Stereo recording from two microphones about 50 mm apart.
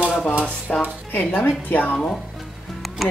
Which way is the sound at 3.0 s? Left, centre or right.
Centre.